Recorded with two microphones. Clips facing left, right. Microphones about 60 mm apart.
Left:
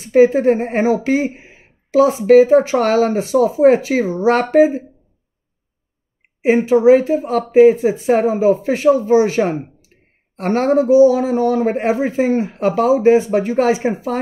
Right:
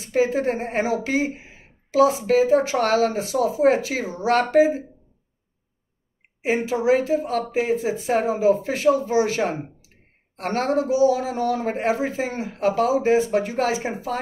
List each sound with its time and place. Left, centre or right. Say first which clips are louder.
0.1 s a man's voice: left 9 dB; left
6.4 s a man's voice: left 10 dB; left